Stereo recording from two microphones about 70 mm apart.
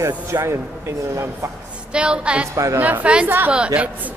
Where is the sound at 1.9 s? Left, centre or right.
Centre.